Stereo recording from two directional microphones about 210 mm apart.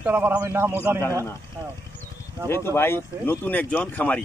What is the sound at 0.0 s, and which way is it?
A man's voice, 10° right (ahead or behind).